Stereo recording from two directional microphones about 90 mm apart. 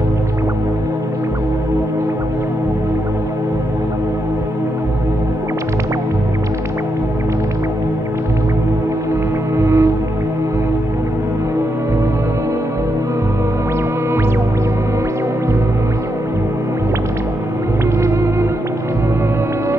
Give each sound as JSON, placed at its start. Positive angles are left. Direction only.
{"t": 9.6, "sound": "music", "side_deg": -30}